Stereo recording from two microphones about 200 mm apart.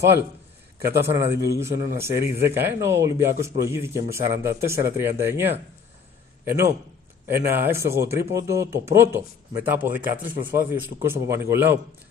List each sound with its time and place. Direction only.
0.9 s a man's voice: 15° right (ahead or behind)